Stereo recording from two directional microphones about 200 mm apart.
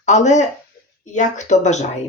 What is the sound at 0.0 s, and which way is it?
Speech, 35° left (ahead or behind).